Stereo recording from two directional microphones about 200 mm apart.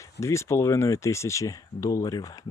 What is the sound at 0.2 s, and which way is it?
Speech, 15° left (ahead or behind).